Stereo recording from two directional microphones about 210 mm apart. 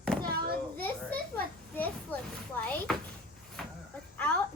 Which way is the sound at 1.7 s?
10° left (ahead or behind).